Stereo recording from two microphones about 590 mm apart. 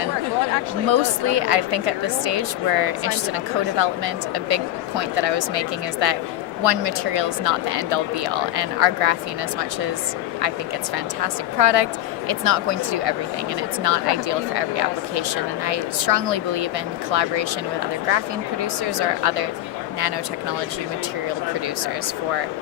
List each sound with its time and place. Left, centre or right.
0.5 s a woman's voice: right
10.9 s a woman's voice: right
18.6 s a woman's voice: right